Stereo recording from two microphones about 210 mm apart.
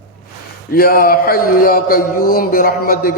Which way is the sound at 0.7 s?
45° left (ahead or behind).